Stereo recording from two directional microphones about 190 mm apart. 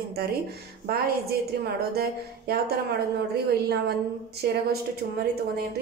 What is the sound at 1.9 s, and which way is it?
Music, 55° right (ahead or behind).